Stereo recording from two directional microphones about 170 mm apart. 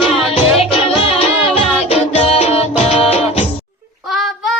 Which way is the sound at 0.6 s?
35° left (ahead or behind).